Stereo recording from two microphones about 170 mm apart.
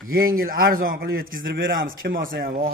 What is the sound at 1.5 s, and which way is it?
A man's voice, 75° right (ahead or behind).